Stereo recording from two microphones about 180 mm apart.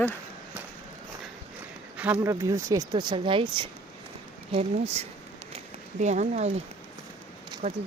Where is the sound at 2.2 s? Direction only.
15° right (ahead or behind); by 6.5 s 40° right (ahead or behind).